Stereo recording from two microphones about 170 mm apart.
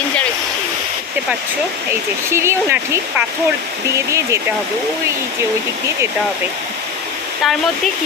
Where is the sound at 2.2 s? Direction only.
15° right (ahead or behind).